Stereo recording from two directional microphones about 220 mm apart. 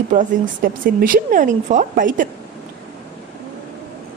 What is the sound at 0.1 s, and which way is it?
Speech, 35° right (ahead or behind).